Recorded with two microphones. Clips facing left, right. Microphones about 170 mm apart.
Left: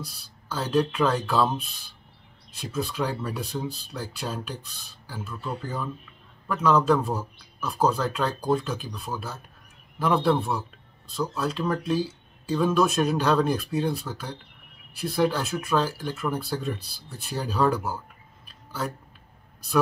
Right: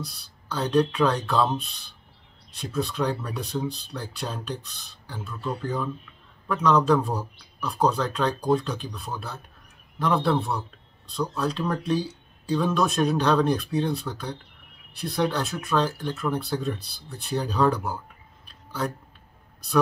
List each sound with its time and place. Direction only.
0.0 s speech: 5° left (ahead or behind)